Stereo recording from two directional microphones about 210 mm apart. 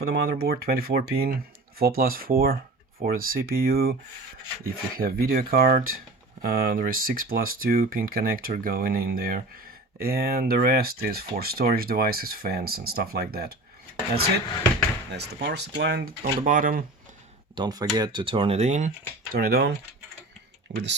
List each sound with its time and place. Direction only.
0.1 s speech: 50° right (ahead or behind)
15.1 s speech: 55° right (ahead or behind)
17.5 s speech: 20° right (ahead or behind)
19.3 s speech: 45° right (ahead or behind)